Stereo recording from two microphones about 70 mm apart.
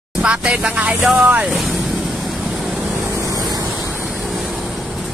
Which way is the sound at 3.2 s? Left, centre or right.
Right.